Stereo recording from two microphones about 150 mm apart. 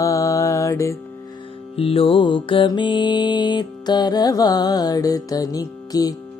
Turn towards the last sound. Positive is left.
turn(degrees=25)  # may be behind; listen again after turning